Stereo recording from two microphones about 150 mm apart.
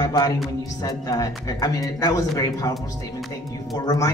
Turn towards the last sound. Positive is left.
turn(degrees=25)  # may be behind; listen again after turning